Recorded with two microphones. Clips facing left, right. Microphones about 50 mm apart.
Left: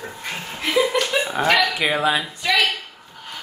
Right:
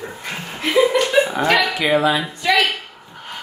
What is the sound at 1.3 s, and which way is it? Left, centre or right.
Speech, centre.